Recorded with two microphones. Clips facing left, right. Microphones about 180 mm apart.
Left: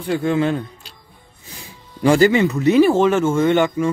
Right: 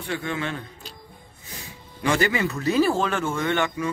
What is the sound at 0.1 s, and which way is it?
Speech, 35° left (ahead or behind).